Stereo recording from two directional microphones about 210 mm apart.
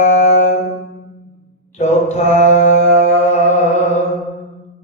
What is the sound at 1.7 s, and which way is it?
Mantra, 30° left (ahead or behind).